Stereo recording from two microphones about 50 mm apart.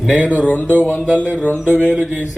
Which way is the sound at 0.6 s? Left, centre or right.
Right.